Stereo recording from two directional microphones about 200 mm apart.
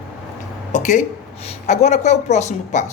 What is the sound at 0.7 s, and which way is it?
A woman's voice, 40° left (ahead or behind).